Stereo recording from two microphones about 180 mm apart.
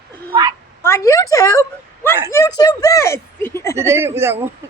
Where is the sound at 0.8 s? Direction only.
15° left (ahead or behind).